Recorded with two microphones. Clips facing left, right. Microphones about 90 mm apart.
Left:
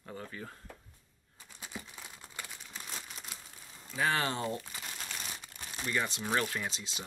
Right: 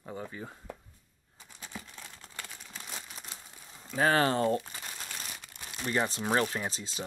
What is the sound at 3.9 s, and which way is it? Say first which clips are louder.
Speech: right 6 dB; 40° right (ahead or behind).